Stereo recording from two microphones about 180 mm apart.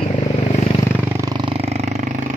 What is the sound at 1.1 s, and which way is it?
Vehicle, 20° right (ahead or behind).